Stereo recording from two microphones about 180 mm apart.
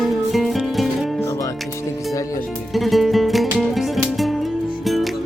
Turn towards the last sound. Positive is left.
turn(degrees=0)  # may be behind; listen again after turning